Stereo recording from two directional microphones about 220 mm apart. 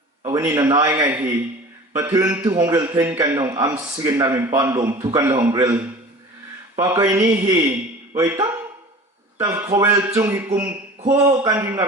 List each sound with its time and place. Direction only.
0.2 s a man's voice: 15° right (ahead or behind)